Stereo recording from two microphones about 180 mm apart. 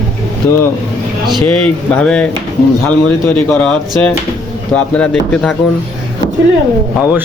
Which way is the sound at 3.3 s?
10° left (ahead or behind).